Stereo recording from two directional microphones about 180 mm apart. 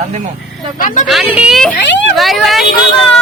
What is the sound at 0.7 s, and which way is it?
Speech, 45° left (ahead or behind).